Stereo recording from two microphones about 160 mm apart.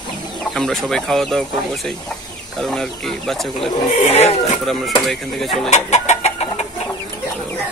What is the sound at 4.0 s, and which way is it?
Speech, 40° left (ahead or behind).